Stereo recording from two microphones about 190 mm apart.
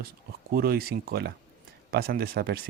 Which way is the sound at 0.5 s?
55° right (ahead or behind).